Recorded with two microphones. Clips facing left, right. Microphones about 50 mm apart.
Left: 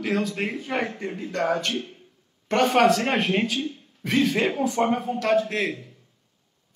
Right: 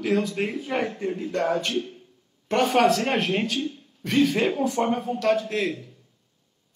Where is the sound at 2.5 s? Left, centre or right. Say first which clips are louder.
Left 1 dB; centre.